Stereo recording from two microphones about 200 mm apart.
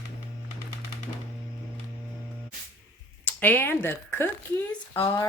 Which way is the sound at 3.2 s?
10° left (ahead or behind).